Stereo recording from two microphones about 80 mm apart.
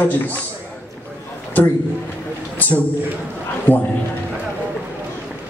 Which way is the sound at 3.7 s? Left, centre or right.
Centre.